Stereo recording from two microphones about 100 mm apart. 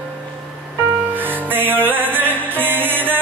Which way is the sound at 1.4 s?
20° right (ahead or behind).